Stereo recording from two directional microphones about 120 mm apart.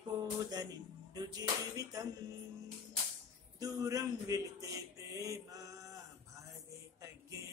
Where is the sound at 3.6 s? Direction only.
30° right (ahead or behind).